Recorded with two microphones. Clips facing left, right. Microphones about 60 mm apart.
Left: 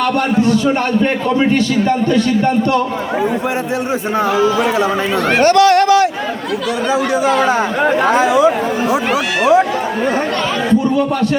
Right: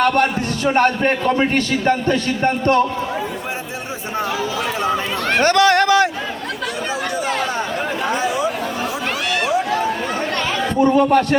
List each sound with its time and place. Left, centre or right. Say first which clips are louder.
0.0 s a man's voice: left 2 dB; right
7.3 s speech: left 8 dB; left
10.8 s a man's voice: right 5 dB; right